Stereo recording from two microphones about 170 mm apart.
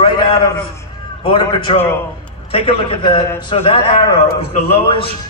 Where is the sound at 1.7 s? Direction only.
30° left (ahead or behind).